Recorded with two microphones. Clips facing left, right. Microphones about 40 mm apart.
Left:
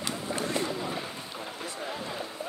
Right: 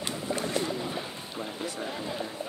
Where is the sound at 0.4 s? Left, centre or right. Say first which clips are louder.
Left 1 dB; left.